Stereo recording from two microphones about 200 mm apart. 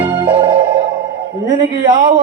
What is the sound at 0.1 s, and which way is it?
Music, 25° right (ahead or behind).